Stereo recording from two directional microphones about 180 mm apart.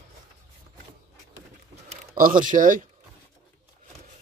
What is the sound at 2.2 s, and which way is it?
Speech, 50° right (ahead or behind).